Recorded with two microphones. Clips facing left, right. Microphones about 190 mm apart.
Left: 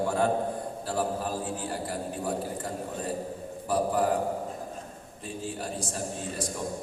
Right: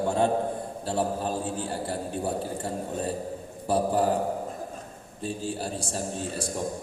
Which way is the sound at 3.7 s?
30° right (ahead or behind).